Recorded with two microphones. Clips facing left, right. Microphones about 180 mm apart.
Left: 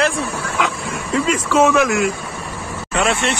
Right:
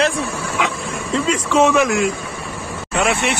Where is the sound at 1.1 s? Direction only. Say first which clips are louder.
Even; 5° left (ahead or behind).